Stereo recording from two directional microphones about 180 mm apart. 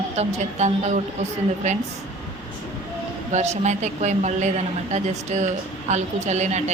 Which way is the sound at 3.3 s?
40° right (ahead or behind).